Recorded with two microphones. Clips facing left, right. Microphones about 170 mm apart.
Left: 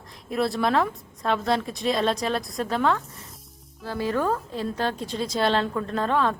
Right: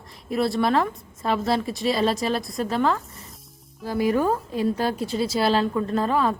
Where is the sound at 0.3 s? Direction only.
Centre (ahead or behind).